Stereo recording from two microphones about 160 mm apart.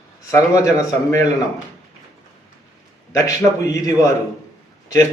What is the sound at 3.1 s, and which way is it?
A man's voice, 20° left (ahead or behind).